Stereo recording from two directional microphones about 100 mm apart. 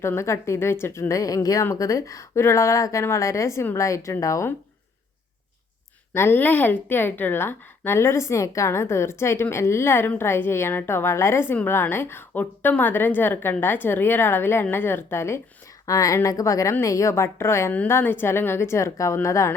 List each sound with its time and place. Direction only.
0.0 s a woman's voice: 25° left (ahead or behind)
6.1 s a woman's voice: 20° left (ahead or behind)